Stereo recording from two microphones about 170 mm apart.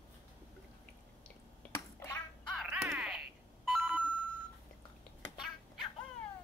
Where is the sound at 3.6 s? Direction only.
10° right (ahead or behind).